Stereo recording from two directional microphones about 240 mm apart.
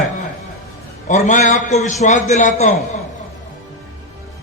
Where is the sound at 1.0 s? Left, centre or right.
Left.